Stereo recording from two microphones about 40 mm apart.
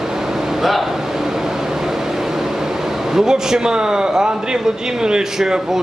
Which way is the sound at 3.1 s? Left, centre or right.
Centre.